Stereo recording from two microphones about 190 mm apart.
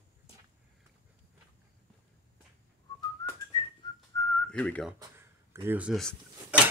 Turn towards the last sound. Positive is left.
turn(degrees=-5)  # may be behind; listen again after turning